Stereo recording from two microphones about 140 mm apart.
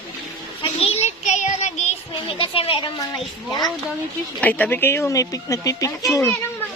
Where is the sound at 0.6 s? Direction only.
45° left (ahead or behind).